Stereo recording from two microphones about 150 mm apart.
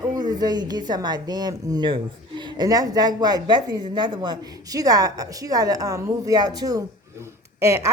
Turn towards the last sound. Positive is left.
turn(degrees=-20)  # may be behind; listen again after turning